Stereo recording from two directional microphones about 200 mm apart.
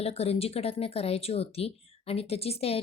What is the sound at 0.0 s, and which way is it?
Speech, 30° left (ahead or behind).